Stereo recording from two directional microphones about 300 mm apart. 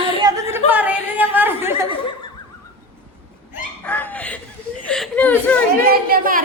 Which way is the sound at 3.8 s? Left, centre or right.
Centre.